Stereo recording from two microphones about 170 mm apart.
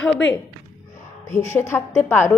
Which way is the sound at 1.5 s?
15° left (ahead or behind).